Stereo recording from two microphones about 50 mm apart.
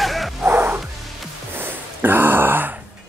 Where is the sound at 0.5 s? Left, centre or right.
Right.